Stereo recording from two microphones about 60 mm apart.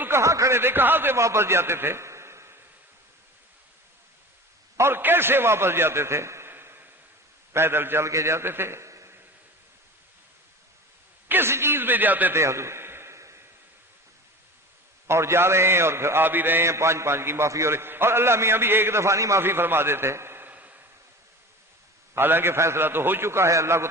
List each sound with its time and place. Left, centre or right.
0.2 s a sound: right
0.6 s a man's voice: right
1.1 s a man's voice: right
4.8 s a man's voice: right
8.0 s a man's voice: right
11.3 s a man's voice: right
12.3 s a sound: right
15.0 s a man's voice: right
16.6 s a man's voice: right
19.4 s a man's voice: right
20.5 s a sound: right
22.1 s a man's voice: right